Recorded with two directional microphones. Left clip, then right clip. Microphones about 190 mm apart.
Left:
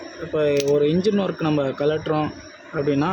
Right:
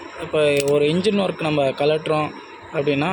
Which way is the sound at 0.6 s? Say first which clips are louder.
Right 1 dB; 15° left (ahead or behind).